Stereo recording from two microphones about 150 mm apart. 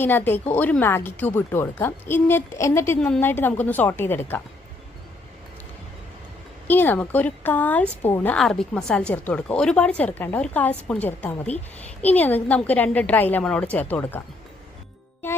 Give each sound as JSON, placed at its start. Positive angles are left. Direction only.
{"t": 0.0, "sound": "speech", "side_deg": 15}
{"t": 6.7, "sound": "speech", "side_deg": 15}